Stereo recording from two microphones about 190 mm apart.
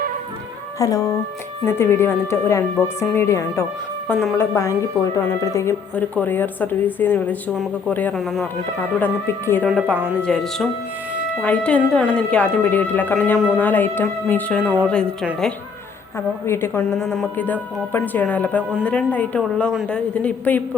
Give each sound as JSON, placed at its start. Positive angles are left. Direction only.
{"t": 0.8, "sound": "speech", "side_deg": 15}
{"t": 4.1, "sound": "speech", "side_deg": 0}
{"t": 4.4, "sound": "speech", "side_deg": 15}
{"t": 9.0, "sound": "speech", "side_deg": 10}
{"t": 11.1, "sound": "music", "side_deg": -5}
{"t": 11.4, "sound": "speech", "side_deg": 5}
{"t": 14.6, "sound": "a woman's voice", "side_deg": -5}
{"t": 14.8, "sound": "speech", "side_deg": 5}